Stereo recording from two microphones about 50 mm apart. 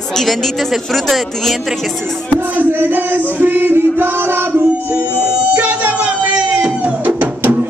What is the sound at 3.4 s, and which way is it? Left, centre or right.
Music, right.